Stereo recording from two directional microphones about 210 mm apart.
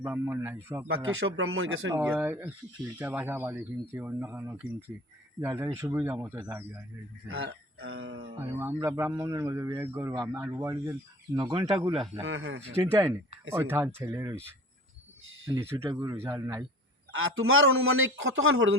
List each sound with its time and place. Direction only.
0.0 s a man's voice: 10° right (ahead or behind)
0.9 s a man's voice: 80° right
2.0 s a man's voice: 10° right (ahead or behind)
7.3 s a man's voice: 75° right (ahead or behind)
8.4 s a man's voice: 10° right (ahead or behind)
11.3 s speech: 25° right (ahead or behind)
12.2 s a man's voice: 75° right (ahead or behind)
12.7 s a man's voice: 15° right (ahead or behind)
15.5 s a man's voice: 15° right (ahead or behind)
17.1 s a man's voice: 75° right (ahead or behind)